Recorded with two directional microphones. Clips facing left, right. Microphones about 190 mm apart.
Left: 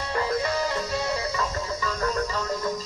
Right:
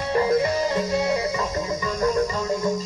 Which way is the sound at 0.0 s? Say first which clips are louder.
Right 6 dB; 20° right (ahead or behind).